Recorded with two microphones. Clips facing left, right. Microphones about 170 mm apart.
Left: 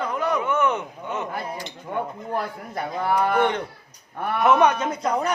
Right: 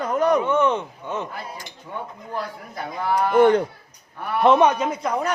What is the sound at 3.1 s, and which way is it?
Speech, 40° right (ahead or behind).